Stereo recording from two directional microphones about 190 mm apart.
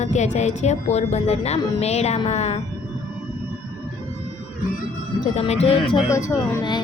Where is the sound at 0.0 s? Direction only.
35° left (ahead or behind).